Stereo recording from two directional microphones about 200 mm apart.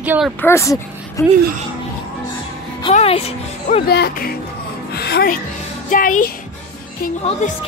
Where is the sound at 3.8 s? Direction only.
50° left (ahead or behind).